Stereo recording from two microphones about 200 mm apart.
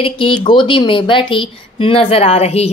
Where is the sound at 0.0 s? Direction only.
25° left (ahead or behind).